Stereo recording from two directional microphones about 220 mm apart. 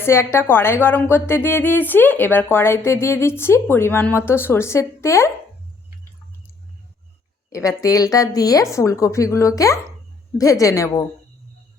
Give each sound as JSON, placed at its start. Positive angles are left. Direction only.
{"t": 0.0, "sound": "a woman's voice", "side_deg": 10}
{"t": 7.5, "sound": "a woman's voice", "side_deg": 15}